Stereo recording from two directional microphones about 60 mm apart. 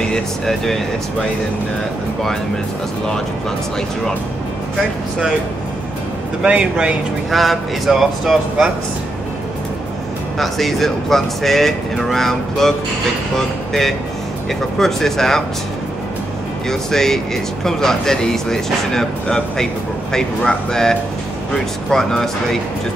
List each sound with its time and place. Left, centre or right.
0.1 s speech: centre
6.4 s speech: centre
7.2 s speech: centre
10.4 s speech: centre
16.6 s speech: centre